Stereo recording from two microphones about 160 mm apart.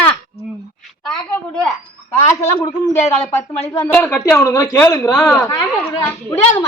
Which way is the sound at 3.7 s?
15° left (ahead or behind).